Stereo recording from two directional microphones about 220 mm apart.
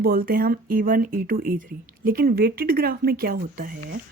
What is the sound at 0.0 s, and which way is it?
Speech, 40° right (ahead or behind).